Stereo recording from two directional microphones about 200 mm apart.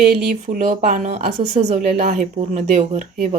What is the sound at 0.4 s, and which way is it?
A woman's voice, 40° right (ahead or behind).